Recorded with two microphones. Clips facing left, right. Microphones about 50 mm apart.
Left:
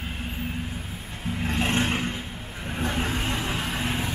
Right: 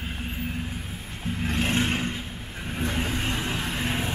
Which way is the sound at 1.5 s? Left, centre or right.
Left.